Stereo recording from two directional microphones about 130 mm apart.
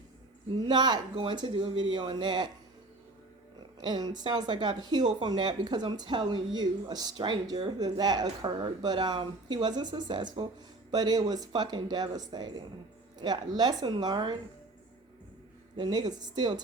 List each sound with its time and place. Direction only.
0.5 s speech: 35° right (ahead or behind)
3.8 s speech: 35° right (ahead or behind)
15.7 s speech: 35° right (ahead or behind)